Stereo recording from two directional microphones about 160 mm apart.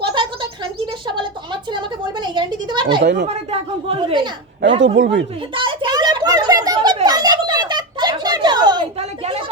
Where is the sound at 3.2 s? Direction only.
40° right (ahead or behind).